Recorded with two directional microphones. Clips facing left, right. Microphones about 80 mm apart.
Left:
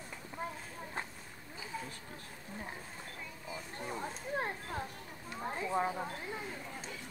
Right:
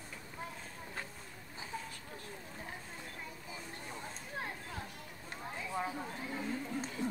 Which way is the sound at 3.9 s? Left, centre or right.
Left.